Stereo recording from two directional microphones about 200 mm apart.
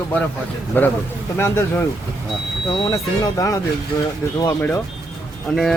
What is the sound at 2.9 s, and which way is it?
Speech, 15° left (ahead or behind).